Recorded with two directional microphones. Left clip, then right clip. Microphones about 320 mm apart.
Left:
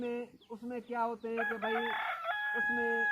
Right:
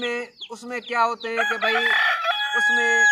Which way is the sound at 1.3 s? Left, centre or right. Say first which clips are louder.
Right 13 dB; right.